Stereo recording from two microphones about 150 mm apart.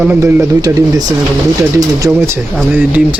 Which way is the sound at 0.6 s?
25° right (ahead or behind).